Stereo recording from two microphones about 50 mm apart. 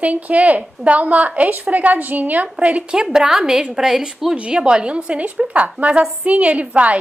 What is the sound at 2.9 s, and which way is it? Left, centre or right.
A woman's voice, centre.